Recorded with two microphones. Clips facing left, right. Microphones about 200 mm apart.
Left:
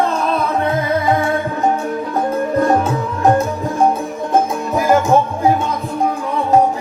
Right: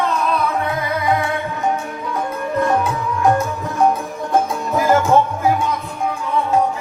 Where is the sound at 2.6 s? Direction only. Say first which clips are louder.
Left 1 dB; 40° left (ahead or behind).